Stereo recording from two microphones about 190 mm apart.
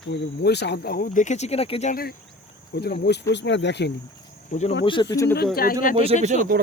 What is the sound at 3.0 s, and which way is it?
Speech, 65° left (ahead or behind).